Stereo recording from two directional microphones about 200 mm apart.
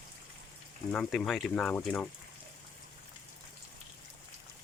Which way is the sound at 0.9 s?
5° left (ahead or behind).